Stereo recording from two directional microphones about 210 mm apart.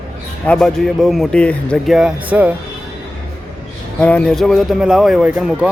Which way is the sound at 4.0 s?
5° left (ahead or behind).